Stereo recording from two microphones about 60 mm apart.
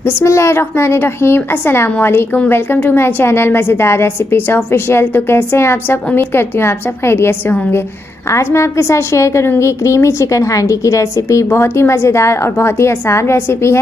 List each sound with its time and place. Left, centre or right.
0.0 s a woman's voice: left
11.4 s a woman's voice: left